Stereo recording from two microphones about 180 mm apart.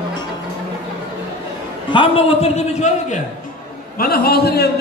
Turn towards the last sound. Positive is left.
turn(degrees=60)  # may be behind; listen again after turning